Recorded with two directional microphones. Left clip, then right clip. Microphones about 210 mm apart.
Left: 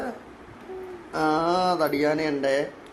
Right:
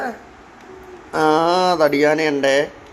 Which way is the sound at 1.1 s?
20° right (ahead or behind).